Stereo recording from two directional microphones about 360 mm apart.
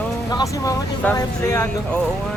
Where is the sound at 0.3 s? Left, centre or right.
Centre.